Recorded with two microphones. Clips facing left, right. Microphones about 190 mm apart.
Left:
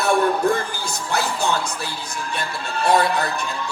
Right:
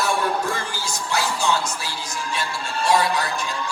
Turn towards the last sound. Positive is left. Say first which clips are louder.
# left 2 dB
turn(degrees=60)  # may be behind; listen again after turning